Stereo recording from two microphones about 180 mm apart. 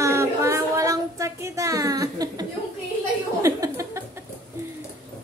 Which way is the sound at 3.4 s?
15° right (ahead or behind).